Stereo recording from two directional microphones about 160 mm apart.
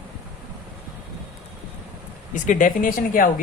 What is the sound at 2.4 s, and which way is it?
Speech, 55° left (ahead or behind).